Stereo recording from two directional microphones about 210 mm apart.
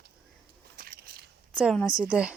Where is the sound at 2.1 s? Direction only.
5° right (ahead or behind).